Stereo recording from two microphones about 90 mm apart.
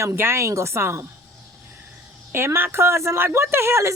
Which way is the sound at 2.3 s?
25° right (ahead or behind).